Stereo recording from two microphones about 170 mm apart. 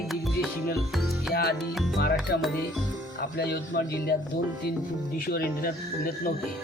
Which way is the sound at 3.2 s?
70° left (ahead or behind).